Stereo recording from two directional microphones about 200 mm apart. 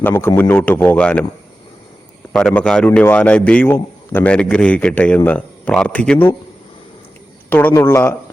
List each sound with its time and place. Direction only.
0.0 s a man's voice: 10° left (ahead or behind)
2.3 s a man's voice: 5° left (ahead or behind)
7.5 s a man's voice: 10° left (ahead or behind)